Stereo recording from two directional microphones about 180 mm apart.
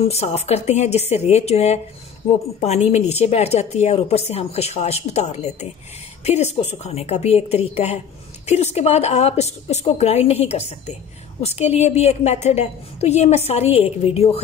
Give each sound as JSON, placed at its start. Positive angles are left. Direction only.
{"t": 0.0, "sound": "a woman's voice", "side_deg": 35}